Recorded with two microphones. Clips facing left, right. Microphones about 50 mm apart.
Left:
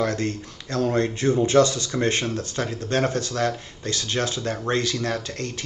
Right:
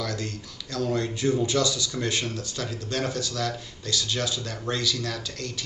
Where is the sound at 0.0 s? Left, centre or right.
Left.